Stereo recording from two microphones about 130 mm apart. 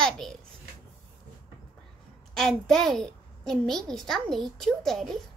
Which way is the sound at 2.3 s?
5° left (ahead or behind).